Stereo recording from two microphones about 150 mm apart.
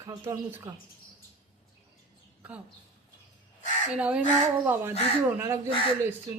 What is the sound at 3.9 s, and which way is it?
Speech, 10° right (ahead or behind).